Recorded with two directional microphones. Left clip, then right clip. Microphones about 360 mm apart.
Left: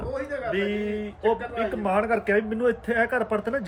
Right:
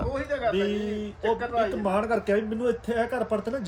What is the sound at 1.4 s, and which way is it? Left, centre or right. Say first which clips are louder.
Speech: right 3 dB; right.